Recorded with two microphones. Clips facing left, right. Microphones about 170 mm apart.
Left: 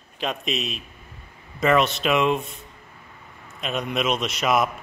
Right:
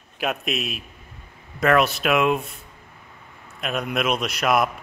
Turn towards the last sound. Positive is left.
turn(degrees=0)  # may be behind; listen again after turning